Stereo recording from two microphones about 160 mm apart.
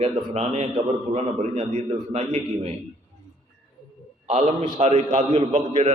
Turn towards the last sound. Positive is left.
turn(degrees=-40)  # may be behind; listen again after turning